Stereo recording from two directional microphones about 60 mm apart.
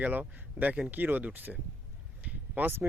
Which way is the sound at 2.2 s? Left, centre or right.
Right.